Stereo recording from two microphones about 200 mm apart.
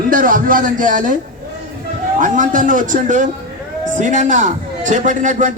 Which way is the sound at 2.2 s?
40° right (ahead or behind).